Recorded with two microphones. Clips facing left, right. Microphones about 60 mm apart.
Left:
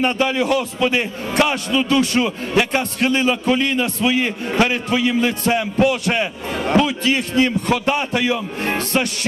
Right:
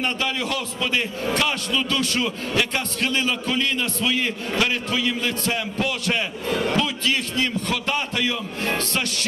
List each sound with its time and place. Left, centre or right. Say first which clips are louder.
0.0 s a man's voice: left 7 dB; left